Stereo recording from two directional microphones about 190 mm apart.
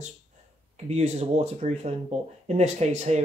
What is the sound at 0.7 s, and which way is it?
Speech, 35° right (ahead or behind).